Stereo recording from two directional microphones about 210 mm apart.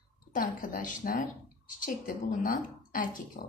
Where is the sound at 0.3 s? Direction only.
40° left (ahead or behind).